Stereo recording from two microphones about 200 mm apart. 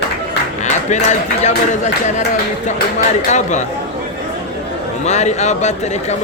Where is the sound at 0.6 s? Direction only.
35° left (ahead or behind).